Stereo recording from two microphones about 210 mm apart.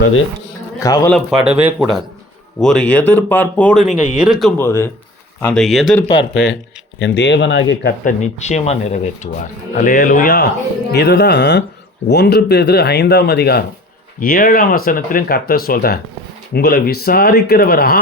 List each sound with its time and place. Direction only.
0.8 s speech: 15° left (ahead or behind)
1.1 s speech: centre (ahead or behind)
4.5 s speech: 10° left (ahead or behind)
6.3 s speech: 55° left (ahead or behind)
8.0 s speech: 35° left (ahead or behind)